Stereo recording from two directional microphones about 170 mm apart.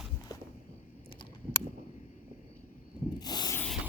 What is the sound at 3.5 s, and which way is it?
Rub, 5° left (ahead or behind).